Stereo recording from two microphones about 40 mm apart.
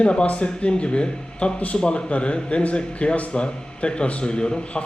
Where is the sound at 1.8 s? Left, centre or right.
Left.